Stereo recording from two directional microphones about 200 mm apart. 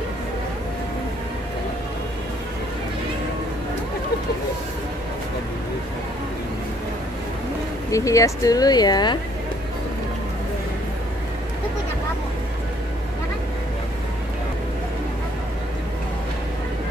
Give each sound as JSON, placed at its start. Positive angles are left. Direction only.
{"t": 7.9, "sound": "speech", "side_deg": 15}